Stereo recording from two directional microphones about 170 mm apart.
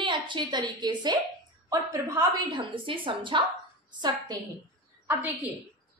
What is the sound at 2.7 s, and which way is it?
Speech, 30° right (ahead or behind).